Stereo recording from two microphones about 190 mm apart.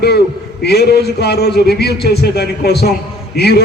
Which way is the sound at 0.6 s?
60° left (ahead or behind).